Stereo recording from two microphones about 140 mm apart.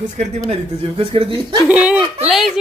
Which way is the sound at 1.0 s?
40° right (ahead or behind).